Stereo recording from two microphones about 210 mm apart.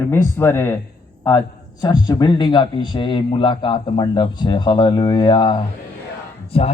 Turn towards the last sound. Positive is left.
turn(degrees=30)  # may be behind; listen again after turning